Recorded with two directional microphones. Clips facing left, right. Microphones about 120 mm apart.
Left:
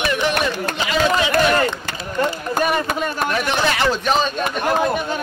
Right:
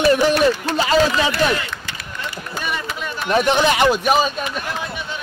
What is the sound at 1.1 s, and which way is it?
Speech, 50° left (ahead or behind).